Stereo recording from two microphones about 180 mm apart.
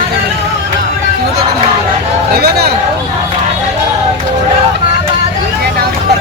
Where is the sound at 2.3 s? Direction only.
60° right (ahead or behind).